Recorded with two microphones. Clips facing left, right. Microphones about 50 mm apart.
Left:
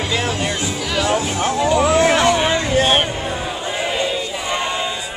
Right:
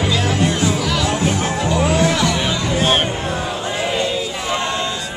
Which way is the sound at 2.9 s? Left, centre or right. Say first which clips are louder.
Even; centre.